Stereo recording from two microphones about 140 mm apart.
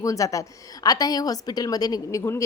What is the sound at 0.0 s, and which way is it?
A woman's voice, 25° left (ahead or behind).